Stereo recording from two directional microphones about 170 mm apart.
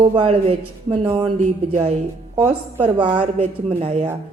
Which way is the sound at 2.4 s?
30° right (ahead or behind).